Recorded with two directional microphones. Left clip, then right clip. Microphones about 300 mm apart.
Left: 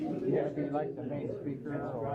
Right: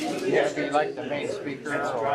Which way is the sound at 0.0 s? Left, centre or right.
Centre.